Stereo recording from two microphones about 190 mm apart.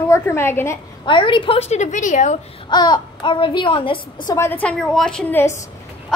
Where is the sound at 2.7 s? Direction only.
25° left (ahead or behind).